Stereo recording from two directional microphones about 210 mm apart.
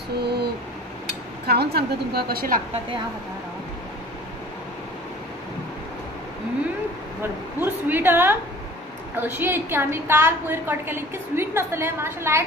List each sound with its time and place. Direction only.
0.2 s a sound: 50° right (ahead or behind)
1.5 s a woman's voice: 50° right (ahead or behind)
7.6 s a woman's voice: 10° right (ahead or behind)